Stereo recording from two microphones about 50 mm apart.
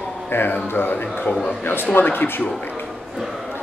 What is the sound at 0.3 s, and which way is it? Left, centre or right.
Speech, left.